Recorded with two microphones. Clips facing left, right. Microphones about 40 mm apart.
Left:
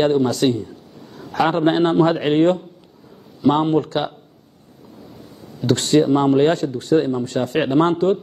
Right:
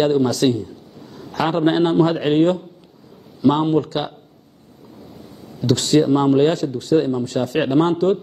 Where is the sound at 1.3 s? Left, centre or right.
Left.